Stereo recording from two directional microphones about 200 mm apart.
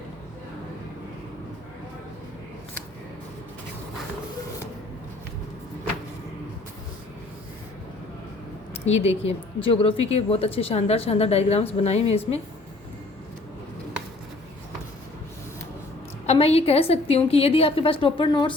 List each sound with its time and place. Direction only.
8.9 s a woman's voice: 30° left (ahead or behind)
16.2 s a woman's voice: 30° left (ahead or behind)